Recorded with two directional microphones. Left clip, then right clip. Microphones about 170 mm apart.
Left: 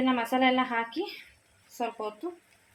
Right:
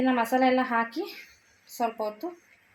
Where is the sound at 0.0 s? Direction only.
30° right (ahead or behind).